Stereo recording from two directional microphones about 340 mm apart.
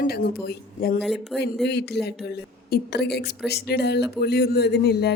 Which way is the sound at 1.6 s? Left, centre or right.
Left.